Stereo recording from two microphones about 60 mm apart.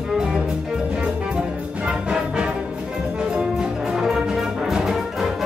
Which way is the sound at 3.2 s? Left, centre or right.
Centre.